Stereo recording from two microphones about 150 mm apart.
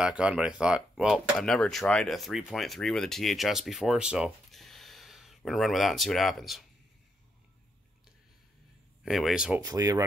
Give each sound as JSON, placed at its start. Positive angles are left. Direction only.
{"t": 0.0, "sound": "speech", "side_deg": -5}
{"t": 9.0, "sound": "speech", "side_deg": 0}
{"t": 9.6, "sound": "speech", "side_deg": -25}